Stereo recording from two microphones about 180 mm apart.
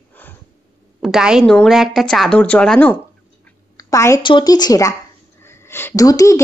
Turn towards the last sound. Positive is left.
turn(degrees=20)  # may be behind; listen again after turning